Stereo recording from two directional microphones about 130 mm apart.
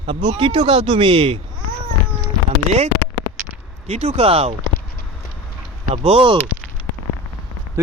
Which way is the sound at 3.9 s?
55° right (ahead or behind).